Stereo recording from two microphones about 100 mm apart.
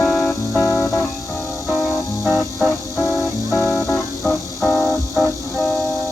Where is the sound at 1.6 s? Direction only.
Centre (ahead or behind).